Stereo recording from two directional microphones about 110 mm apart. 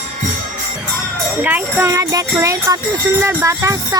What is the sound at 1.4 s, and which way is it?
Speech, 15° right (ahead or behind).